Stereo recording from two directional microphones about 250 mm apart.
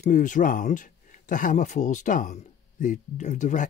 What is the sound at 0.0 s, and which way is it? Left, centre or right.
Speech, left.